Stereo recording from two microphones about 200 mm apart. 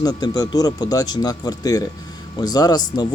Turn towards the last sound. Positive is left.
turn(degrees=20)  # may be behind; listen again after turning